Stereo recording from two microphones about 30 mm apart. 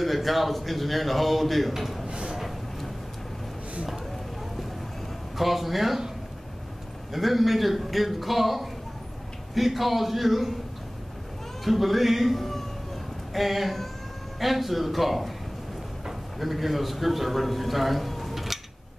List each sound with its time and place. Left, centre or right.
0.0 s a man's voice: centre
2.0 s a sound: right
5.4 s a man's voice: centre
7.1 s a man's voice: centre
11.6 s a man's voice: centre